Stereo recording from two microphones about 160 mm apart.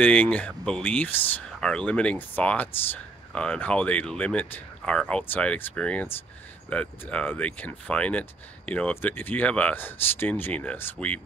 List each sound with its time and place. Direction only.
0.0 s speech: 10° left (ahead or behind)